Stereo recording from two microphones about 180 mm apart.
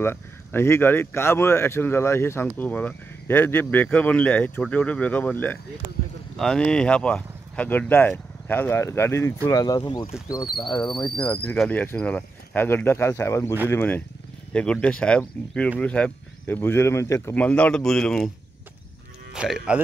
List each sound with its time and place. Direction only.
0.0 s speech: 10° left (ahead or behind)
11.1 s speech: 5° left (ahead or behind)
19.3 s speech: 5° right (ahead or behind)